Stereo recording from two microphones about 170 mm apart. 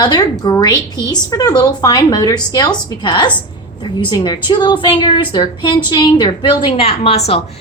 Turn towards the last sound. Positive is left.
turn(degrees=35)  # may be behind; listen again after turning